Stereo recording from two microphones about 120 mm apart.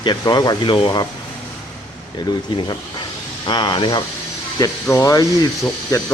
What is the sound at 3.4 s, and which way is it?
Speech, 40° left (ahead or behind).